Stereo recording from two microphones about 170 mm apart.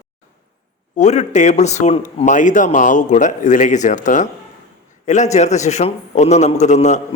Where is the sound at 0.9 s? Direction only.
40° left (ahead or behind).